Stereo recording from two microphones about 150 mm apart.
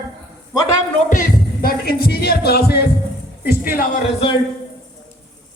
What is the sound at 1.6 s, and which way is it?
Speech, 90° left.